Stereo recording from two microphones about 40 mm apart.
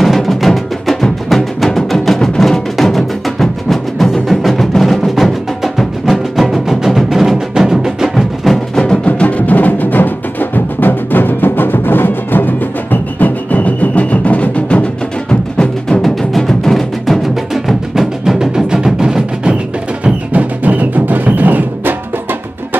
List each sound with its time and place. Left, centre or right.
0.0 s music: centre
9.0 s music: left
16.0 s music: centre
20.0 s music: right